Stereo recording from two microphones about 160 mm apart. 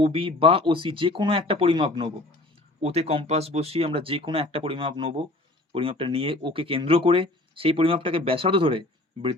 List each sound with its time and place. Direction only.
0.0 s speech: 35° right (ahead or behind)